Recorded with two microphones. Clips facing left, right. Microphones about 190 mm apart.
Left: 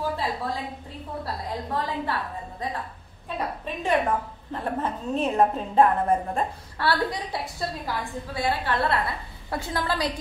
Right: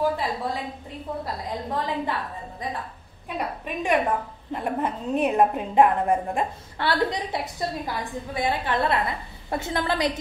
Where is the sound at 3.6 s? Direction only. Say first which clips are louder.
Right 1 dB; 15° right (ahead or behind).